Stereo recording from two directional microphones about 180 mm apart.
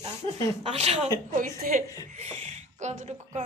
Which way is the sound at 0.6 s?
35° right (ahead or behind).